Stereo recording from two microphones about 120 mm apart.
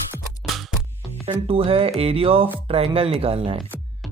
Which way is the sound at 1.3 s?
50° right (ahead or behind).